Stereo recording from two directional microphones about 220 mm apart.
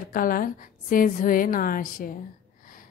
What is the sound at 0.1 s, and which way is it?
A woman's voice, 40° left (ahead or behind).